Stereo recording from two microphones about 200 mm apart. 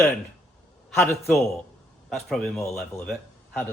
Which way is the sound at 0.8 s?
10° left (ahead or behind).